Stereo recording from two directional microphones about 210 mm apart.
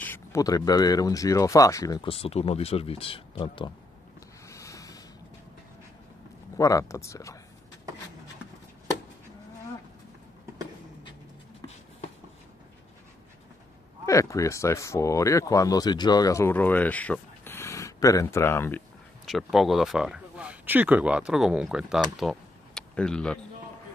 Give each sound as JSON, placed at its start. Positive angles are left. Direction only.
{"t": 0.0, "sound": "speech", "side_deg": 10}
{"t": 4.5, "sound": "a sound", "side_deg": 15}
{"t": 6.5, "sound": "speech", "side_deg": 15}
{"t": 14.0, "sound": "speech", "side_deg": 15}
{"t": 19.2, "sound": "speech", "side_deg": 0}
{"t": 22.2, "sound": "insect", "side_deg": 0}